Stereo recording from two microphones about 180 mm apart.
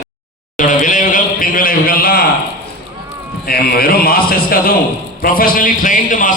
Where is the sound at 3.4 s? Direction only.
55° left (ahead or behind).